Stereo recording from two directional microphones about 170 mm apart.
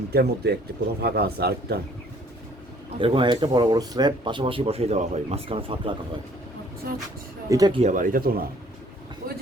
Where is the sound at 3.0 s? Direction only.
30° right (ahead or behind).